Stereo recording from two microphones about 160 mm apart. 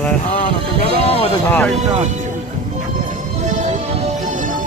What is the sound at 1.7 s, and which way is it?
Speech, 45° right (ahead or behind).